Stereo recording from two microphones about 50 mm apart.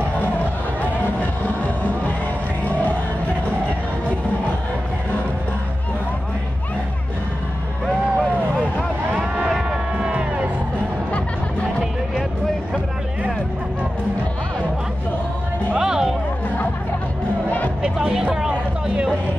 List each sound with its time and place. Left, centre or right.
1.6 s music: left
9.5 s music: centre
15.8 s music: centre
18.1 s a sound: centre